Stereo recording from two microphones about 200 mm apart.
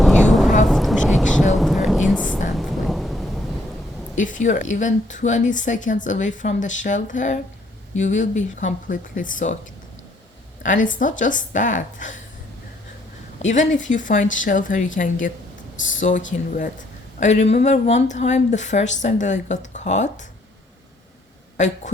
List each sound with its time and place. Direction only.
0.0 s a sound: centre (ahead or behind)
1.5 s music: centre (ahead or behind)
2.6 s thunder: centre (ahead or behind)
4.1 s speech: 40° left (ahead or behind)
10.6 s speech: 40° left (ahead or behind)
13.4 s speech: 35° left (ahead or behind)
21.6 s speech: 35° left (ahead or behind)